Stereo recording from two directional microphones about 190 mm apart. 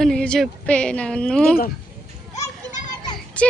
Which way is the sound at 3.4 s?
5° left (ahead or behind).